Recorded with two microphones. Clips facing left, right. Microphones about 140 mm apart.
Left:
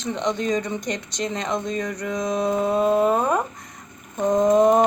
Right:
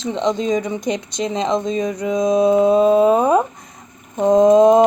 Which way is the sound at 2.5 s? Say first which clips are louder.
Right 5 dB; 90° right.